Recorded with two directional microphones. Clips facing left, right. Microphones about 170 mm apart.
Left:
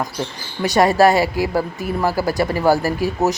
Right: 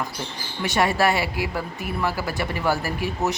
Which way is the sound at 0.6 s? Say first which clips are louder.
Left 7 dB; 40° left (ahead or behind).